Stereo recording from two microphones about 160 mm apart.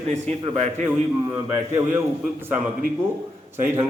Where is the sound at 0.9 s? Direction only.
15° right (ahead or behind).